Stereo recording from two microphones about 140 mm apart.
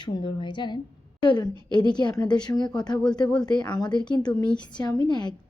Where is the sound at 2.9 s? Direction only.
5° left (ahead or behind).